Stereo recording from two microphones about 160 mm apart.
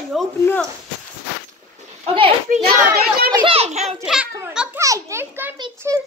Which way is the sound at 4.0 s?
5° right (ahead or behind).